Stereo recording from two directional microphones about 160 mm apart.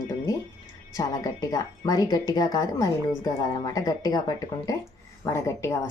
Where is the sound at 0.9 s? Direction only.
20° left (ahead or behind).